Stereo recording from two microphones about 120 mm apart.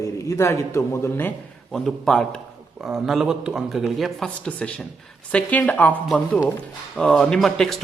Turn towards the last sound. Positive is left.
turn(degrees=5)  # may be behind; listen again after turning